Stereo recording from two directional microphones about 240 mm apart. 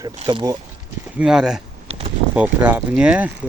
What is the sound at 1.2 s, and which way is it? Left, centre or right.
Speech, centre.